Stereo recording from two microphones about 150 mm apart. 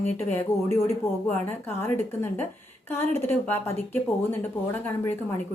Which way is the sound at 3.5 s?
15° left (ahead or behind).